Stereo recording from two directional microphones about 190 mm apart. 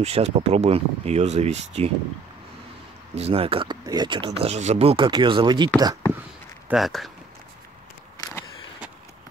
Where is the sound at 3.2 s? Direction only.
30° right (ahead or behind).